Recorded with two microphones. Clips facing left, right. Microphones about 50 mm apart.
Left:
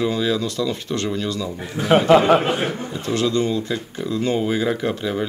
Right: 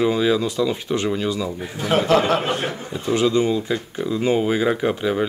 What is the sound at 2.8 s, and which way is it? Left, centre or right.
Speech, centre.